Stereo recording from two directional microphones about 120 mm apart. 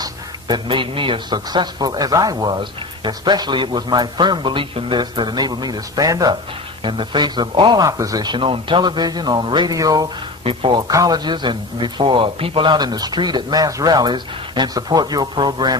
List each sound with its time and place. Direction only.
0.0 s a man's voice: 40° right (ahead or behind)
6.8 s a man's voice: 40° right (ahead or behind)
8.4 s a man's voice: 45° right (ahead or behind)
10.4 s speech: 50° right (ahead or behind)
10.8 s a man's voice: 30° right (ahead or behind)